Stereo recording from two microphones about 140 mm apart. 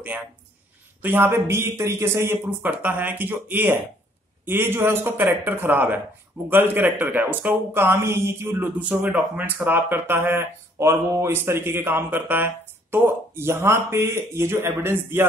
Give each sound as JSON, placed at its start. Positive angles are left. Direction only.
{"t": 1.0, "sound": "speech", "side_deg": -15}